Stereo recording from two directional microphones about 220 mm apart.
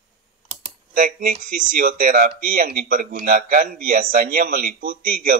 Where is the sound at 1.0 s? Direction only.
35° right (ahead or behind).